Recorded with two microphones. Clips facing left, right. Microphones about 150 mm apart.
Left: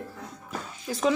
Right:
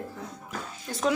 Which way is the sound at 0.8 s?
Centre (ahead or behind).